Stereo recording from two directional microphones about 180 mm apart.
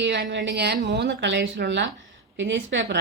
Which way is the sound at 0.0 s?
75° right (ahead or behind).